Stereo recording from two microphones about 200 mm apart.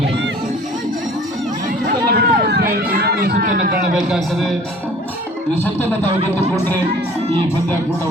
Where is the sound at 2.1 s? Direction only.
50° right (ahead or behind).